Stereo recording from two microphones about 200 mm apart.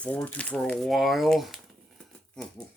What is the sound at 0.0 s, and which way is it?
Speech, 5° left (ahead or behind).